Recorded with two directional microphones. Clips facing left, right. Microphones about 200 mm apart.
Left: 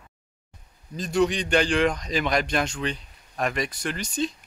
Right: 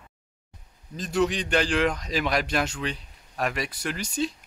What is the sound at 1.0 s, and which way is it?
A man's voice, centre (ahead or behind).